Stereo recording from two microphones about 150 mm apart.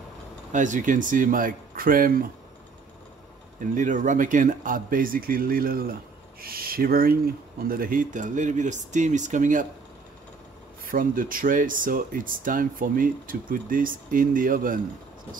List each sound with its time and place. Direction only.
0.5 s speech: 55° right (ahead or behind)
3.7 s speech: 60° right (ahead or behind)
10.9 s speech: 65° right (ahead or behind)